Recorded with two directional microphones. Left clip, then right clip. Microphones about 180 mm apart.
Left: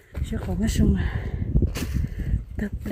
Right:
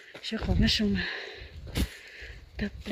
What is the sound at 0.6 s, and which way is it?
Speech, 25° left (ahead or behind).